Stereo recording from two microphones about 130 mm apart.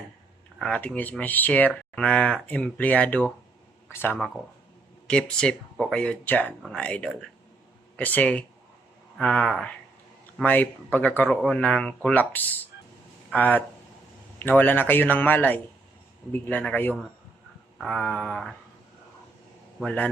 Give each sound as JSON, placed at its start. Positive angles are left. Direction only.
{"t": 0.6, "sound": "speech", "side_deg": 10}
{"t": 17.7, "sound": "speech", "side_deg": 0}
{"t": 19.8, "sound": "speech", "side_deg": 10}